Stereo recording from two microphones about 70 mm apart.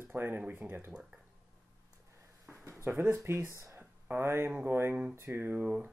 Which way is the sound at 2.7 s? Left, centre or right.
Right.